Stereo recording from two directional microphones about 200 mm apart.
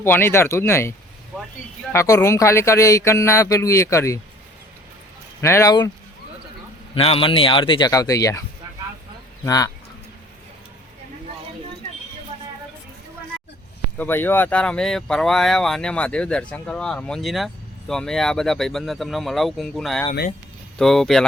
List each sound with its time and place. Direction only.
0.0 s speech: 10° left (ahead or behind)
5.4 s speech: 15° left (ahead or behind)
6.9 s speech: 30° left (ahead or behind)
14.0 s speech: 10° left (ahead or behind)